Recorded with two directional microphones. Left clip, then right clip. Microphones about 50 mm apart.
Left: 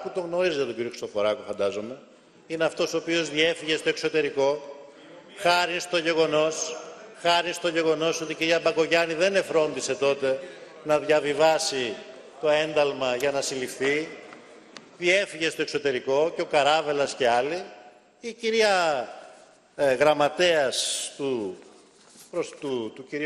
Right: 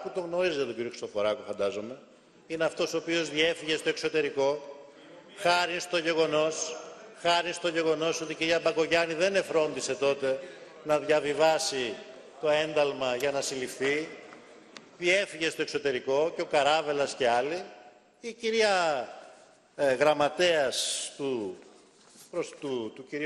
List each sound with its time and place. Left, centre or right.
0.0 s a man's voice: left